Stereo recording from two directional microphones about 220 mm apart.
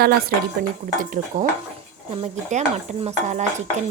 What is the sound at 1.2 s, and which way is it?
A woman's voice, 35° right (ahead or behind).